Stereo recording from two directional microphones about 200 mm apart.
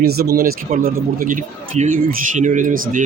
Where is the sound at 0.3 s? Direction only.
45° right (ahead or behind).